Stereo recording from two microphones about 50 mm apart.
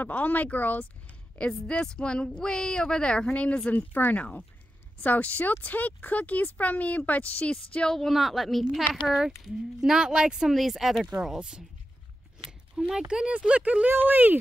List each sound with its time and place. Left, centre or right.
0.0 s speech: left
1.4 s speech: centre
3.7 s speech: left
4.2 s speech: left
7.9 s a woman's voice: centre; by 13.8 s right
13.8 s speech: right